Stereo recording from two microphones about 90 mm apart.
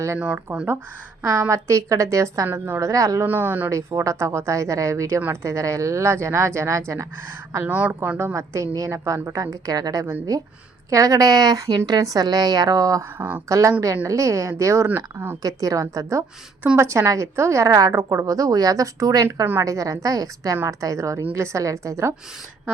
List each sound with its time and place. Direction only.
0.2 s speech: 15° right (ahead or behind)
1.2 s a woman's voice: 35° right (ahead or behind)
3.2 s speech: 20° right (ahead or behind)
3.7 s a woman's voice: 35° right (ahead or behind)
7.7 s speech: 15° right (ahead or behind)
8.2 s a woman's voice: 30° right (ahead or behind)
13.1 s speech: 20° right (ahead or behind)
13.5 s a woman's voice: 35° right (ahead or behind)
15.4 s a woman's voice: 40° right (ahead or behind)